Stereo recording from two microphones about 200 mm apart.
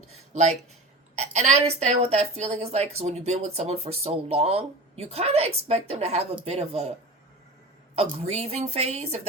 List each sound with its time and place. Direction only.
0.3 s a woman's voice: 35° right (ahead or behind)
7.9 s a woman's voice: 30° right (ahead or behind)